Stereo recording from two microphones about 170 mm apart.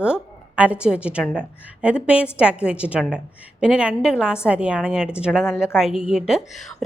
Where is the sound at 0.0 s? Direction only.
5° right (ahead or behind).